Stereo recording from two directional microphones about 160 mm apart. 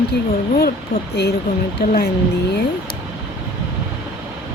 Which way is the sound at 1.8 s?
90° left.